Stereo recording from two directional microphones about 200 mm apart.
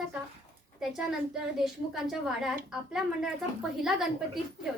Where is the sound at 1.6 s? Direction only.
Centre (ahead or behind).